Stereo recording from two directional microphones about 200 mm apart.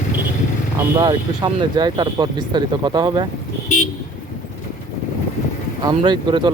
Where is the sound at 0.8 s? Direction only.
15° right (ahead or behind).